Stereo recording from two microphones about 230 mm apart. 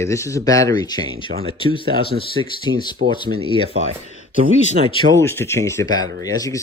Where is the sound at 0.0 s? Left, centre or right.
Centre.